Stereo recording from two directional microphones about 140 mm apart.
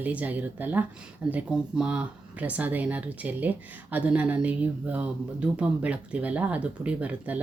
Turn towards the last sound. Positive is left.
turn(degrees=-10)  # may be behind; listen again after turning